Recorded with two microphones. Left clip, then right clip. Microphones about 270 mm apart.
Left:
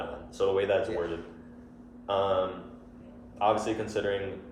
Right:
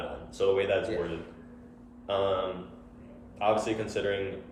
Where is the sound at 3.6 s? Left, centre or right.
Centre.